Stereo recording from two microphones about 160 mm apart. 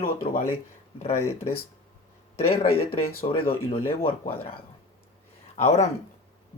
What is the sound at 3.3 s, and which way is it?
Speech, 35° left (ahead or behind).